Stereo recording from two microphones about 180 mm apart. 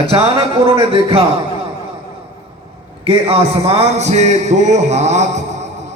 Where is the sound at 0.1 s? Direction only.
30° right (ahead or behind).